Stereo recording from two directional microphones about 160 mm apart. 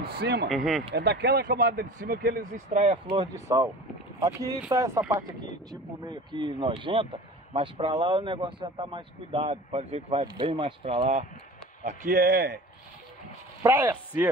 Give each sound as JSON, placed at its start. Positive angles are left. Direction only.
{"t": 0.0, "sound": "speech", "side_deg": -85}
{"t": 0.5, "sound": "speech", "side_deg": 0}
{"t": 0.9, "sound": "speech", "side_deg": -90}
{"t": 2.5, "sound": "speech", "side_deg": -45}
{"t": 3.4, "sound": "speech", "side_deg": -20}
{"t": 12.2, "sound": "a man's voice", "side_deg": -75}
{"t": 13.6, "sound": "speech", "side_deg": -15}